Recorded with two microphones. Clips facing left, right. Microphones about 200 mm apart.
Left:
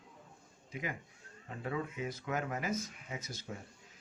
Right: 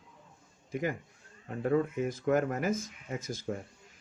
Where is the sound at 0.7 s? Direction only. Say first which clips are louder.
Right 8 dB; 45° right (ahead or behind).